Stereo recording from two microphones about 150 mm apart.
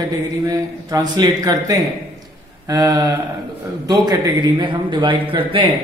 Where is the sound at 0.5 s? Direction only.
25° right (ahead or behind).